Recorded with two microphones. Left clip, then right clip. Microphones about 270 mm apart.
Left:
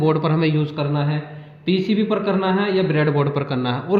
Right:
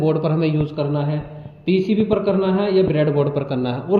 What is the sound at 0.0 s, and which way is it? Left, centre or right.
A man's voice, left.